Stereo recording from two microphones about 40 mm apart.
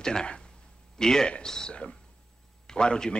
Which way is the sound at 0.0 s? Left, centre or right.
Centre.